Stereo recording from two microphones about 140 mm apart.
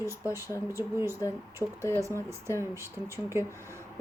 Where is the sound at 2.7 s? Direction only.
20° right (ahead or behind).